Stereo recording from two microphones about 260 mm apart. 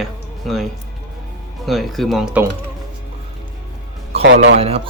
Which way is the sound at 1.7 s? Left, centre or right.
Centre.